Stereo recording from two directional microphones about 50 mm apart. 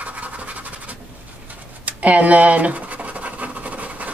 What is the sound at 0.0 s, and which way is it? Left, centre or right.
Scratch, right.